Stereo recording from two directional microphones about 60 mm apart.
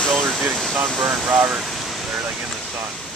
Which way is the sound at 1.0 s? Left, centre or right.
Right.